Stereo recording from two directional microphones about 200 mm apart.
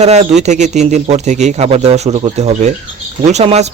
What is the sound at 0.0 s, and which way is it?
Speech, 35° right (ahead or behind).